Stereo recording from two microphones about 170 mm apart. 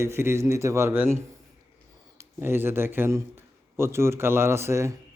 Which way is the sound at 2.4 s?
15° right (ahead or behind).